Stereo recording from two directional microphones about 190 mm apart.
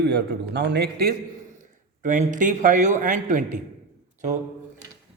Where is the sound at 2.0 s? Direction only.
40° right (ahead or behind).